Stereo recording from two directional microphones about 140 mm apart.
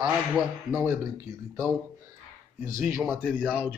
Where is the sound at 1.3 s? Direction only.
25° right (ahead or behind).